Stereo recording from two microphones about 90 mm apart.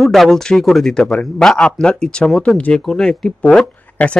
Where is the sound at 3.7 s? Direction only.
15° left (ahead or behind).